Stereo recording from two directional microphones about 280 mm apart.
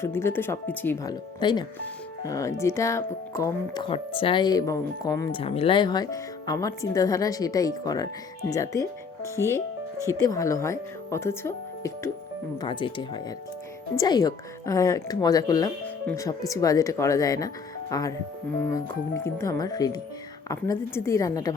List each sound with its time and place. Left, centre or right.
0.0 s speech: centre